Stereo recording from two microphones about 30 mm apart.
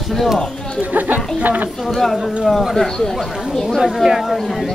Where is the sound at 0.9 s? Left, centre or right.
Right.